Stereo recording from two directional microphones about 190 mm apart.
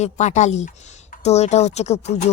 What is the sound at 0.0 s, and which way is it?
Speech, 40° left (ahead or behind).